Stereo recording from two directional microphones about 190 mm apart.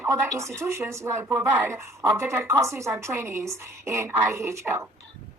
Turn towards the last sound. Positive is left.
turn(degrees=-15)  # may be behind; listen again after turning